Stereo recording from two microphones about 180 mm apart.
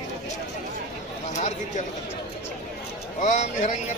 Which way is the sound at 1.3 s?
40° left (ahead or behind).